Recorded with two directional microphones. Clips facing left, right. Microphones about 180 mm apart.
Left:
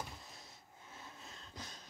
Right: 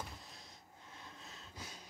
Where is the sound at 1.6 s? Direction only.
10° right (ahead or behind).